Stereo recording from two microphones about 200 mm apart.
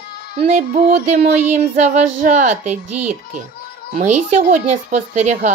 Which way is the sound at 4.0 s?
35° right (ahead or behind).